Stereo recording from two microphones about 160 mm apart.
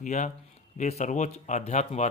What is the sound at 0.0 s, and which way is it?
Speech, 50° left (ahead or behind).